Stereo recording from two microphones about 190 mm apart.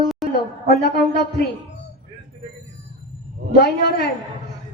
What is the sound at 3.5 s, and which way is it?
Speech, 55° left (ahead or behind).